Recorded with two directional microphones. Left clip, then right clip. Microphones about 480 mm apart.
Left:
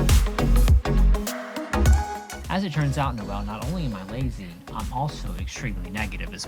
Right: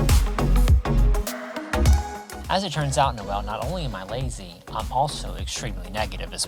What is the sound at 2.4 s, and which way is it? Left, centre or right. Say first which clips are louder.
Speech: right 5 dB; right.